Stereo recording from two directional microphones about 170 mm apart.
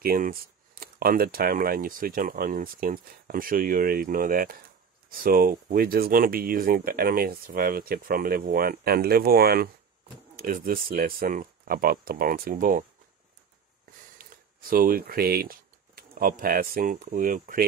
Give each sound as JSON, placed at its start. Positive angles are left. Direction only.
{"t": 0.0, "sound": "speech", "side_deg": -60}
{"t": 14.1, "sound": "speech", "side_deg": -55}